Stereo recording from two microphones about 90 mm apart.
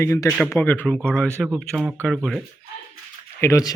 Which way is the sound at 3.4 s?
35° left (ahead or behind).